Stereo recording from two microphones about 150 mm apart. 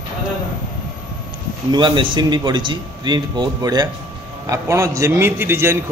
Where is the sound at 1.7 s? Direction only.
30° right (ahead or behind).